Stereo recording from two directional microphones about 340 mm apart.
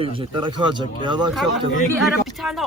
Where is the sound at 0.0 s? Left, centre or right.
Centre.